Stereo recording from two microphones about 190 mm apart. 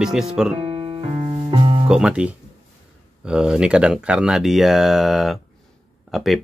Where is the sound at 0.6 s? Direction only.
30° right (ahead or behind).